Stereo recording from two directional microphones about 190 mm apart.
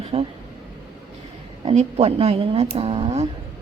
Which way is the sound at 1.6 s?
35° right (ahead or behind).